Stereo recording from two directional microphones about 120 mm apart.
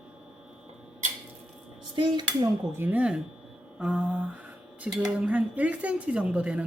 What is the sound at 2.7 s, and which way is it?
Speech, 15° right (ahead or behind).